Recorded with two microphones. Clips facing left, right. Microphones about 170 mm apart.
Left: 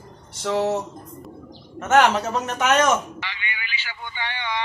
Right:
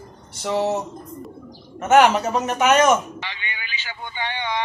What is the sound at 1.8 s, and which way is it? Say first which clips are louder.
Speech: right 3 dB; 10° right (ahead or behind).